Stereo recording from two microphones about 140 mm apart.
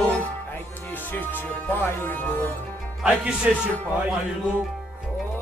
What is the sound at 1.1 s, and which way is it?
Speech, 15° left (ahead or behind).